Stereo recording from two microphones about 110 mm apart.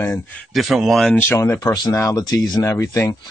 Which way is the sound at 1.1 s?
20° left (ahead or behind).